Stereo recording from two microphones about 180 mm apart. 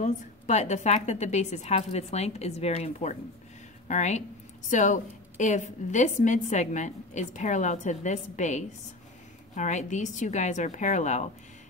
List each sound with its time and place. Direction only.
0.0 s a woman's voice: 40° left (ahead or behind)